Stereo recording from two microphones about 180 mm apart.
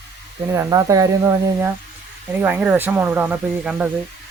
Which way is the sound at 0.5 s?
20° right (ahead or behind).